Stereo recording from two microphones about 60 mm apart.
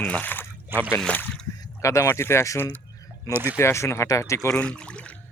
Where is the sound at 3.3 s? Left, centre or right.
Right.